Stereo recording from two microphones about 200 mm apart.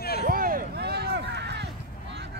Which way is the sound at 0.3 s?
45° right (ahead or behind).